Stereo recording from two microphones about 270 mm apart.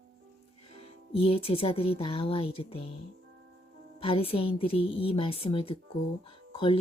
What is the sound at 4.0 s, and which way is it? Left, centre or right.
Speech, centre.